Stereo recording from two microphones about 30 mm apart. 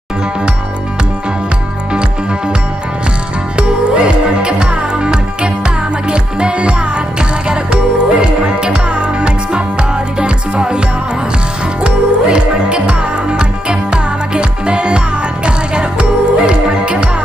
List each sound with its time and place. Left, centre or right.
3.5 s music: right
11.8 s music: right